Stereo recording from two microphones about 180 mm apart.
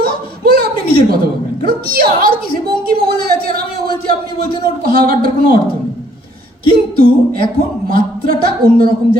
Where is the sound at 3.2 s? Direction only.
60° right (ahead or behind).